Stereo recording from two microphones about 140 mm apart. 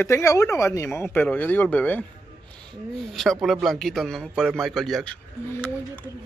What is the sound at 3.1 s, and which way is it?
A man's voice, centre (ahead or behind).